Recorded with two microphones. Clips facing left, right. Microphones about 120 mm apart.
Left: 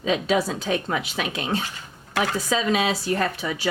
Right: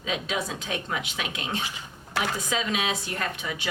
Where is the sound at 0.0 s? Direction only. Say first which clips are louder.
Left 8 dB; 35° left (ahead or behind).